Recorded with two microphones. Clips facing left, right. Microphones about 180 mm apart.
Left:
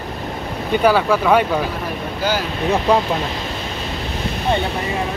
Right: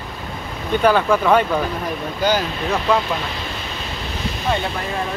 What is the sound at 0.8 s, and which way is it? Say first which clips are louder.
Speech: even; 5° left (ahead or behind).